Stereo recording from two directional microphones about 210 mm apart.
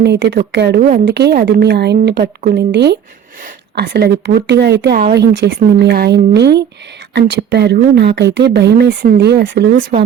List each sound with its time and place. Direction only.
0.0 s speech: 55° right (ahead or behind)
0.8 s speech: 40° right (ahead or behind)
1.0 s speech: 50° right (ahead or behind)